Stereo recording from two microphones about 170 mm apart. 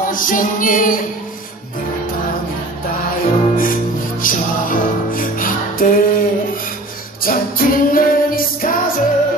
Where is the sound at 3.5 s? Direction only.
55° left (ahead or behind).